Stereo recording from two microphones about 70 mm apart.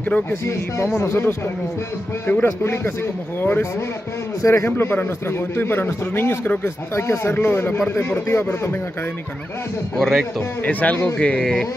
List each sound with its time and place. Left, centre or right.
0.3 s speech: left
2.4 s speech: left
4.4 s speech: left
9.9 s a man's voice: centre
10.6 s speech: left